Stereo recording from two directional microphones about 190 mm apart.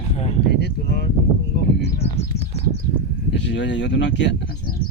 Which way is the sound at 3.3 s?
65° left (ahead or behind).